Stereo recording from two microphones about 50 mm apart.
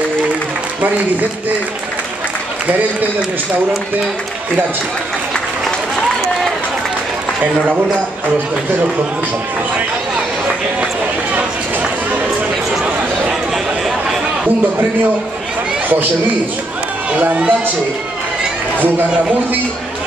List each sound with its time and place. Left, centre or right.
13.8 s chatter: centre
17.1 s speech: right